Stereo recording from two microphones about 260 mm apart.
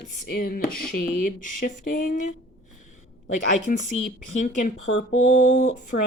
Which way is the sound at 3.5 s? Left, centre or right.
Left.